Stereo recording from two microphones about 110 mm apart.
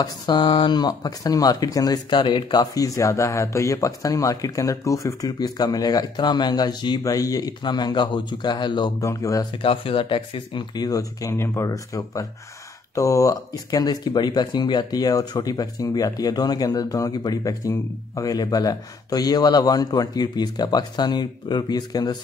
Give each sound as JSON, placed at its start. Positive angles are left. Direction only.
{"t": 0.0, "sound": "speech", "side_deg": 45}
{"t": 9.0, "sound": "speech", "side_deg": 30}
{"t": 9.6, "sound": "speech", "side_deg": 55}
{"t": 10.7, "sound": "speech", "side_deg": 35}